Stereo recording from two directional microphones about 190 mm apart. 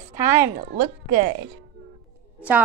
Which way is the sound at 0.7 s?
45° right (ahead or behind).